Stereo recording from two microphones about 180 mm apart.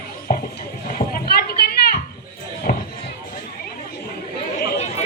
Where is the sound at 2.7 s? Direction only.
50° left (ahead or behind).